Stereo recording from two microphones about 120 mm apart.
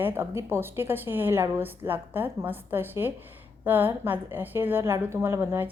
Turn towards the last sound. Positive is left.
turn(degrees=-15)  # may be behind; listen again after turning